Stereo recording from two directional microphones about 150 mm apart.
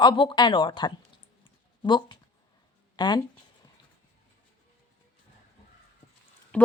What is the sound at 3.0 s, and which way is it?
Speech, 30° left (ahead or behind).